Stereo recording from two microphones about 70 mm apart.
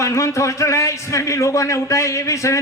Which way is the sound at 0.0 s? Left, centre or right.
Left.